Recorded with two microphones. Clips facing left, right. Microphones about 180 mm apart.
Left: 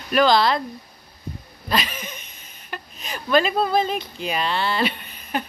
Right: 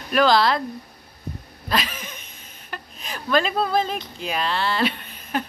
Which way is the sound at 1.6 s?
Centre (ahead or behind).